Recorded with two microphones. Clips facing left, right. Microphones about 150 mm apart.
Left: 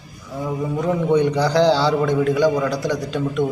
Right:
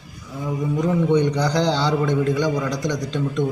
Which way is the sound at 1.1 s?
5° left (ahead or behind).